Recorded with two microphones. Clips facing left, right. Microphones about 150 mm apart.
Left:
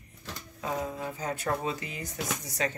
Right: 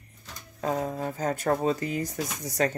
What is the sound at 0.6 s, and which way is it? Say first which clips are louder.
Speech: right 5 dB; 45° right (ahead or behind).